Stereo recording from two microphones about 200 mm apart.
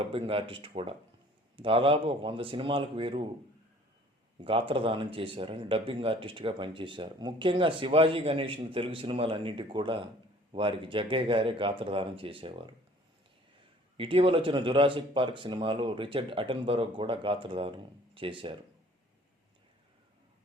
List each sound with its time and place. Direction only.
0.0 s speech: 25° right (ahead or behind)
4.4 s speech: 25° right (ahead or behind)
13.9 s speech: 25° right (ahead or behind)